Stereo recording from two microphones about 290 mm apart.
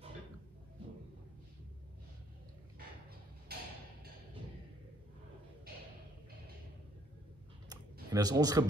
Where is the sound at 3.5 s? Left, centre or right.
Right.